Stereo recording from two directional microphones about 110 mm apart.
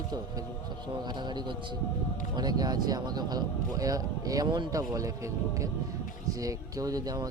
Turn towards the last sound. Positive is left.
turn(degrees=-35)  # may be behind; listen again after turning